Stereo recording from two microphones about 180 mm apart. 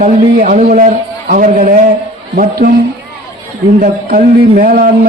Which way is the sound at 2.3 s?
55° right (ahead or behind).